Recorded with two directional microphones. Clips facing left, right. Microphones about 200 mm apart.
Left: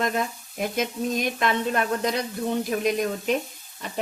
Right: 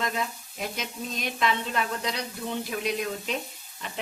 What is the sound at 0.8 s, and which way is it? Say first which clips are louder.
Sizzle: left 9 dB; 50° left (ahead or behind).